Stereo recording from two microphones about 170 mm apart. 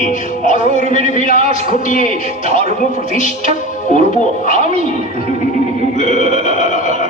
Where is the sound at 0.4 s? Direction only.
50° left (ahead or behind).